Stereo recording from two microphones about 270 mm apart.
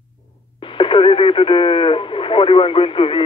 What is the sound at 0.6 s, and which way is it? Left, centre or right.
Radio, centre.